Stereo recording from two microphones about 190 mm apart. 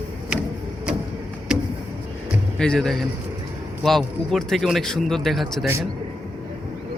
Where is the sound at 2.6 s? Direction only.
5° left (ahead or behind).